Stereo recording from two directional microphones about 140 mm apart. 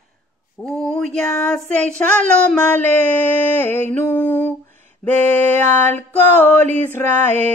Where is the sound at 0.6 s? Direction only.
5° left (ahead or behind).